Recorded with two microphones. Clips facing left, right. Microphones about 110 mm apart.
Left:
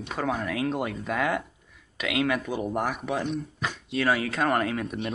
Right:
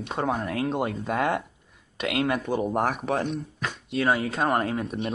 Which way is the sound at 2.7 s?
35° right (ahead or behind).